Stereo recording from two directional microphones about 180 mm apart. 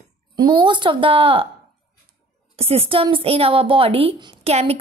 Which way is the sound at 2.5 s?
35° right (ahead or behind).